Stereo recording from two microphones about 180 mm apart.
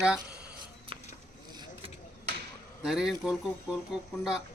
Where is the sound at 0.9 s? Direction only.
30° right (ahead or behind).